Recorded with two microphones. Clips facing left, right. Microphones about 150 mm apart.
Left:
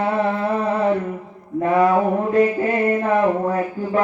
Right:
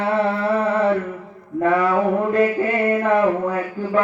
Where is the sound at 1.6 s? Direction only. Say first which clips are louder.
Left 1 dB; 30° left (ahead or behind).